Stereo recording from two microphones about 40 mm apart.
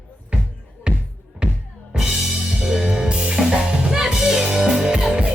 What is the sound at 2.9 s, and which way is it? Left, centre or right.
Music, centre.